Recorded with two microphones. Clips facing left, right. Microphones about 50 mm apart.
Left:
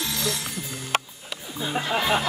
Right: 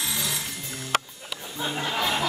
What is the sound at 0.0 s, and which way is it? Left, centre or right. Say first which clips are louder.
Music: left 2 dB; centre.